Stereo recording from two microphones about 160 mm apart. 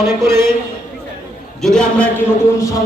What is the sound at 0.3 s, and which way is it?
Speech, 15° right (ahead or behind).